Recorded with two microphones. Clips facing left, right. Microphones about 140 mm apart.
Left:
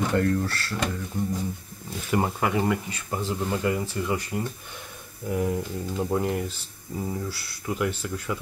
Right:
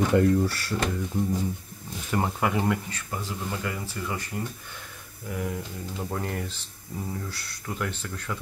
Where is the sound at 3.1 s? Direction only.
25° left (ahead or behind).